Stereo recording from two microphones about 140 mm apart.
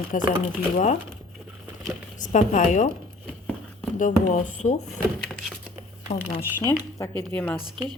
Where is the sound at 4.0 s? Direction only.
65° left (ahead or behind).